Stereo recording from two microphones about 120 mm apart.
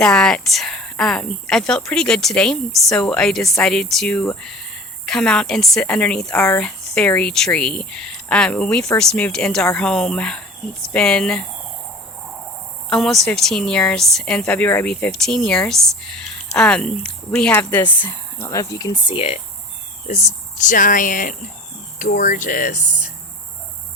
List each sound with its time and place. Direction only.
0.0 s speech: 5° left (ahead or behind)
12.9 s speech: centre (ahead or behind); by 19.1 s 35° left (ahead or behind)
19.1 s speech: 55° left (ahead or behind)
20.6 s speech: 90° left